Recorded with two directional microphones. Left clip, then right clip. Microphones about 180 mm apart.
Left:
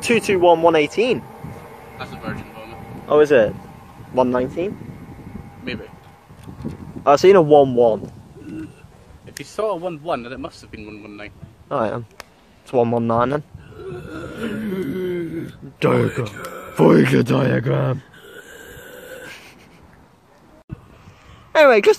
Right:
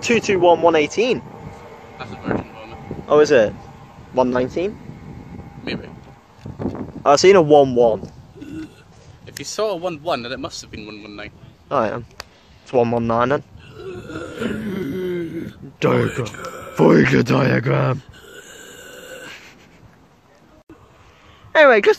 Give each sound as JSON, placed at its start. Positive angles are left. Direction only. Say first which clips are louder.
{"t": 0.0, "sound": "speech", "louder": "even", "side_deg": 5}
{"t": 3.1, "sound": "speech", "louder": "even", "side_deg": -5}
{"t": 4.4, "sound": "speech", "louder": "right 1 dB", "side_deg": -15}
{"t": 7.0, "sound": "speech", "louder": "even", "side_deg": 5}
{"t": 9.4, "sound": "speech", "louder": "right 1 dB", "side_deg": -60}
{"t": 11.7, "sound": "speech", "louder": "right 2 dB", "side_deg": 5}
{"t": 12.2, "sound": "a sound", "louder": "right 3 dB", "side_deg": -35}
{"t": 12.6, "sound": "speech", "louder": "even", "side_deg": 0}
{"t": 13.7, "sound": "a sound", "louder": "even", "side_deg": -60}
{"t": 14.3, "sound": "a sound", "louder": "even", "side_deg": 0}
{"t": 15.8, "sound": "speech", "louder": "even", "side_deg": 5}
{"t": 17.9, "sound": "a sound", "louder": "even", "side_deg": -55}
{"t": 21.5, "sound": "speech", "louder": "even", "side_deg": 5}